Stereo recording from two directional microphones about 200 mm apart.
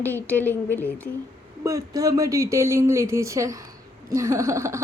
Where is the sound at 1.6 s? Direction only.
15° right (ahead or behind).